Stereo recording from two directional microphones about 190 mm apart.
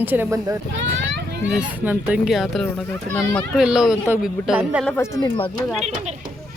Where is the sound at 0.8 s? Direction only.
70° right (ahead or behind).